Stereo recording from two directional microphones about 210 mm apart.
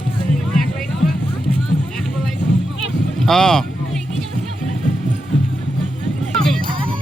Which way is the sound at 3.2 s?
5° left (ahead or behind).